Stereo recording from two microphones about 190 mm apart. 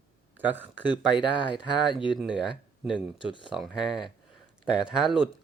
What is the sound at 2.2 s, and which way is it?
Speech, 5° right (ahead or behind).